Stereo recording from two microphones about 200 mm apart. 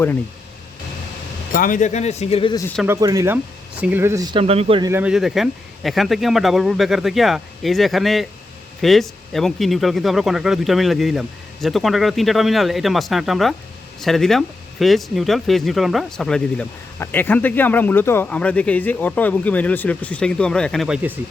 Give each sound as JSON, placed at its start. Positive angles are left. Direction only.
{"t": 1.5, "sound": "speech", "side_deg": 40}
{"t": 2.8, "sound": "speech", "side_deg": -15}
{"t": 4.9, "sound": "speech", "side_deg": -10}